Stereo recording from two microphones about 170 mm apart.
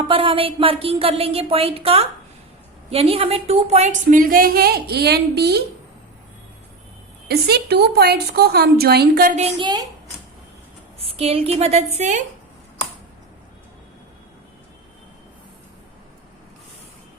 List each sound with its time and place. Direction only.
0.1 s a woman's voice: 30° right (ahead or behind); by 5.6 s 70° right (ahead or behind)
7.3 s a woman's voice: 70° right (ahead or behind)
9.6 s a woman's voice: 25° right (ahead or behind)
11.0 s speech: 35° right (ahead or behind)